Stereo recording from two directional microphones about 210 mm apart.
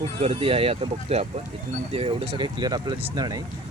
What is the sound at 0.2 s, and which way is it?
Speech, 30° right (ahead or behind).